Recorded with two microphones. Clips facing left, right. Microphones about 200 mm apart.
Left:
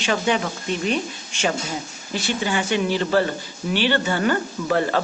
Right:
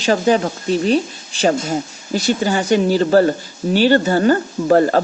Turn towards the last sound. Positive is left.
turn(degrees=-40)  # may be behind; listen again after turning